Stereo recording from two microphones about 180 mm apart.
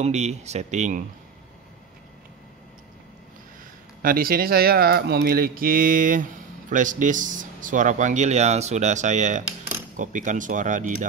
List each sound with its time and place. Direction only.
0.0 s speech: 40° right (ahead or behind)
4.0 s speech: 55° right (ahead or behind)